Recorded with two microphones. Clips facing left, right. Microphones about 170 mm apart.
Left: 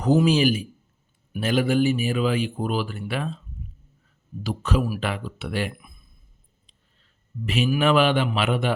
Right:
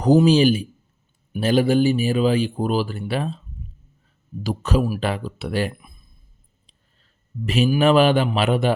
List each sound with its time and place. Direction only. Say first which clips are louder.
0.0 s speech: right 4 dB; 35° right (ahead or behind)
4.4 s speech: right 3 dB; 40° right (ahead or behind)
7.4 s speech: right 4 dB; 40° right (ahead or behind)